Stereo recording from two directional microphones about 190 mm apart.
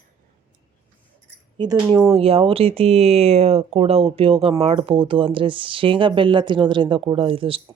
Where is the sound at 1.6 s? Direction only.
20° right (ahead or behind).